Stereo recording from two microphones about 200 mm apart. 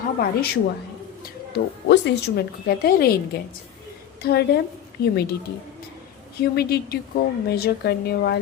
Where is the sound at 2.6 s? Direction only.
50° left (ahead or behind).